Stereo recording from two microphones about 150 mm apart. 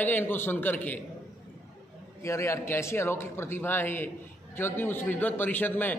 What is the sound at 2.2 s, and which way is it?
A man's voice, 20° left (ahead or behind).